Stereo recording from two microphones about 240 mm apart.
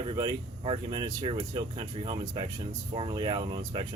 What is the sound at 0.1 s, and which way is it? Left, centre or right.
Speech, right.